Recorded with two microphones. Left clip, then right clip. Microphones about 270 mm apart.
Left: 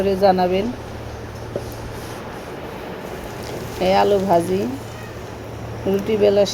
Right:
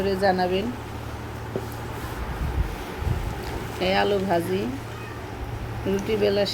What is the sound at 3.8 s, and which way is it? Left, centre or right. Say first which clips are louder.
Speech: left 6 dB; centre.